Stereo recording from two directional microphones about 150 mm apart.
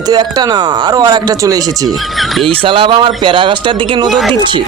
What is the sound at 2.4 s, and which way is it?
Speech, 35° right (ahead or behind).